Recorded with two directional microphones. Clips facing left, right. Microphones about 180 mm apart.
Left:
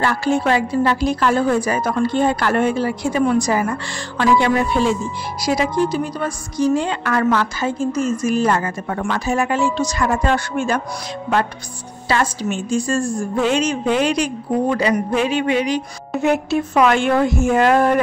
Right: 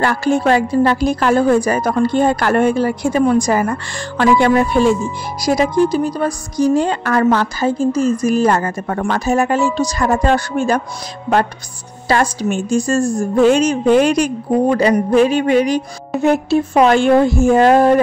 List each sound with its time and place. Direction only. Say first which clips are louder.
0.0 s a woman's voice: right 3 dB; 45° right (ahead or behind)
12.1 s a woman's voice: right 4 dB; 45° right (ahead or behind)